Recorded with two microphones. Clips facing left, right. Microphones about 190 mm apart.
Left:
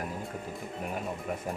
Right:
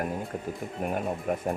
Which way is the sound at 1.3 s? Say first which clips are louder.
Right 7 dB; 50° right (ahead or behind).